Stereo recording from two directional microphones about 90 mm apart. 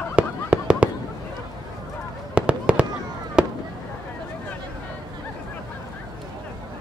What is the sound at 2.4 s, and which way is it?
Fireworks, 15° right (ahead or behind).